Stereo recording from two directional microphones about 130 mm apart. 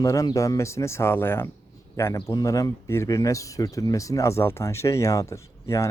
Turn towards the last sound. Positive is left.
turn(degrees=25)  # may be behind; listen again after turning